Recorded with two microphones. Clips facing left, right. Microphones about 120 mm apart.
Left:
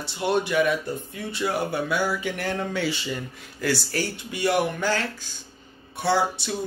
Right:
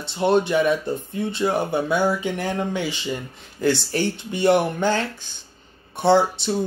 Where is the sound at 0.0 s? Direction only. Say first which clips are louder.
Right 5 dB; 25° right (ahead or behind).